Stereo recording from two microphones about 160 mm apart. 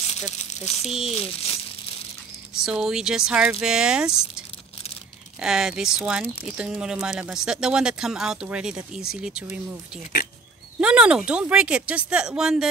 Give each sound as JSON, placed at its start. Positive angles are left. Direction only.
{"t": 0.1, "sound": "speech", "side_deg": 45}
{"t": 2.6, "sound": "speech", "side_deg": -5}
{"t": 5.4, "sound": "speech", "side_deg": -5}
{"t": 10.8, "sound": "speech", "side_deg": -5}